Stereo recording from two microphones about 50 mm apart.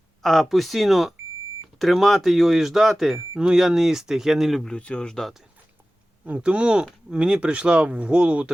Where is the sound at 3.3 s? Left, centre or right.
Centre.